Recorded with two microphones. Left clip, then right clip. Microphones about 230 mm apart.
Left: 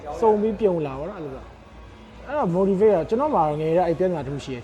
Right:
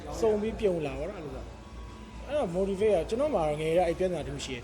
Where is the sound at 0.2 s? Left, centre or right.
Left.